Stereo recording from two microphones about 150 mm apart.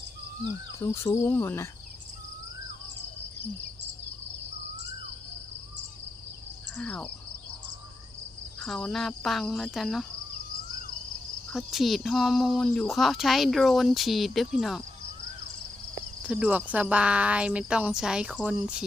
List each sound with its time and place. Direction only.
0.8 s cricket: 15° left (ahead or behind)
6.7 s cricket: 10° left (ahead or behind)
8.6 s speech: centre (ahead or behind)
11.5 s speech: centre (ahead or behind)
16.2 s speech: 10° right (ahead or behind)